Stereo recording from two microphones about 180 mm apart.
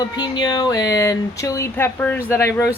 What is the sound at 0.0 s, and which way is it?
Speech, 20° left (ahead or behind).